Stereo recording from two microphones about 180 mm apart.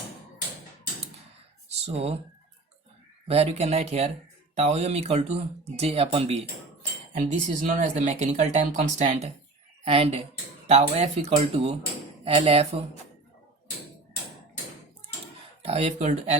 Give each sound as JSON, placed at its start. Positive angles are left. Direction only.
{"t": 1.8, "sound": "speech", "side_deg": -35}
{"t": 3.2, "sound": "speech", "side_deg": -35}
{"t": 15.6, "sound": "speech", "side_deg": -35}